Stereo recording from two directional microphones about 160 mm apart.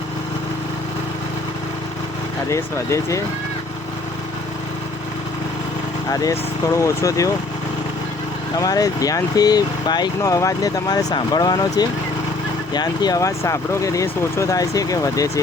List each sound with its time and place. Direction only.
2.5 s speech: 20° left (ahead or behind)
6.1 s speech: 20° left (ahead or behind)
8.5 s speech: 20° left (ahead or behind)